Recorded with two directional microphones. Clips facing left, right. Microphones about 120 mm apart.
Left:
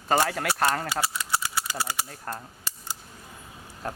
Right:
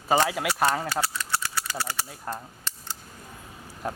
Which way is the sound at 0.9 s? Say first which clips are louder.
Even; 15° left (ahead or behind).